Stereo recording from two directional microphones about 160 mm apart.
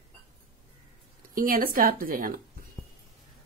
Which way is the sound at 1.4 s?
60° right (ahead or behind).